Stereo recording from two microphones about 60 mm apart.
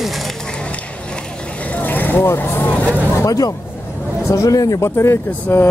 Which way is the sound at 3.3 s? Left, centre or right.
Left.